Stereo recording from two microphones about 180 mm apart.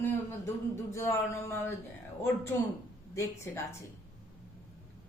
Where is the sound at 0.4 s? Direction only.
15° left (ahead or behind).